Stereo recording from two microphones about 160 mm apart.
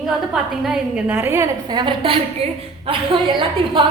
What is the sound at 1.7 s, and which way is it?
A woman's voice, 30° right (ahead or behind).